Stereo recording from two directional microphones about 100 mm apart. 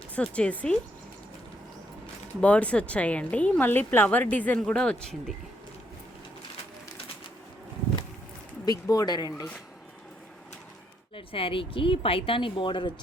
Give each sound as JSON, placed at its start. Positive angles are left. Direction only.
{"t": 0.2, "sound": "speech", "side_deg": 10}
{"t": 2.4, "sound": "speech", "side_deg": 15}
{"t": 8.6, "sound": "speech", "side_deg": 40}
{"t": 11.1, "sound": "speech", "side_deg": 65}